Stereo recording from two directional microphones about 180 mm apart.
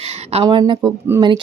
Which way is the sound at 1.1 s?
15° right (ahead or behind).